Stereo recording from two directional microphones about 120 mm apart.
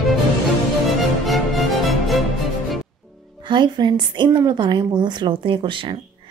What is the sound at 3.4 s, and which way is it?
A woman's voice, 40° right (ahead or behind).